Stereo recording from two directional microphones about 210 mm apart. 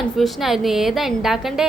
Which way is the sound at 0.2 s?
Centre (ahead or behind).